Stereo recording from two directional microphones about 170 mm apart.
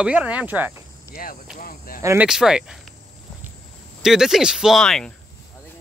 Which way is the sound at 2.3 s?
5° right (ahead or behind).